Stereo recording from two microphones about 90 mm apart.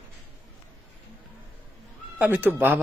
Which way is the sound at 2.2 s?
20° right (ahead or behind).